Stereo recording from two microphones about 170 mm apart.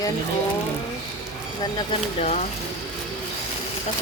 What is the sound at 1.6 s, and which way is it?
Speech, 25° left (ahead or behind).